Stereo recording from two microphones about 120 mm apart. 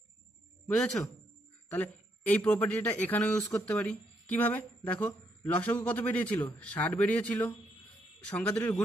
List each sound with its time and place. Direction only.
1.7 s a man's voice: 10° left (ahead or behind)